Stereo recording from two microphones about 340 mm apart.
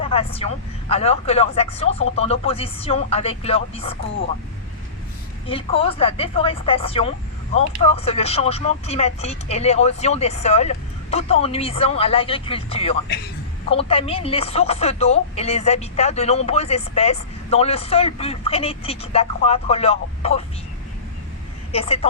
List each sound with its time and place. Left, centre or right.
0.0 s speech: centre
5.5 s speech: centre
21.7 s speech: centre